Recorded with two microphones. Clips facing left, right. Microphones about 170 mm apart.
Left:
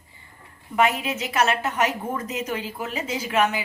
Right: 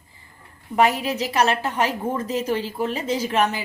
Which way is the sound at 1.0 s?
35° right (ahead or behind).